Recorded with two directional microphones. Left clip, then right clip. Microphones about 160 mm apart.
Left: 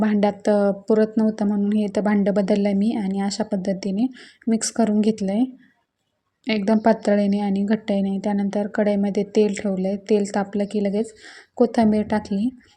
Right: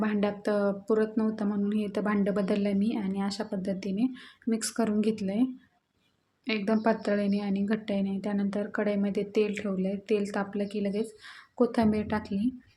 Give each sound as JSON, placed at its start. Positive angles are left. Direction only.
{"t": 0.0, "sound": "speech", "side_deg": 30}